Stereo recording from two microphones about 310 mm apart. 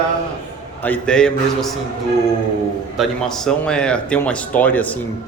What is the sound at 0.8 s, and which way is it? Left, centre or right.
Speech, centre.